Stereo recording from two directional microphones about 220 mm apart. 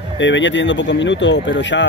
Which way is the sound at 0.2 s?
55° left (ahead or behind).